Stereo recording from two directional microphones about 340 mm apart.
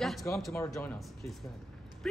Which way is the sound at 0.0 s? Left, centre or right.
Centre.